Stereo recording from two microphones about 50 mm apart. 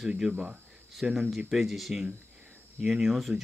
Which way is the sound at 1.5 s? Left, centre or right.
Centre.